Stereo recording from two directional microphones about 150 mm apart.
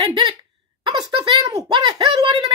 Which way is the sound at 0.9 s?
30° right (ahead or behind).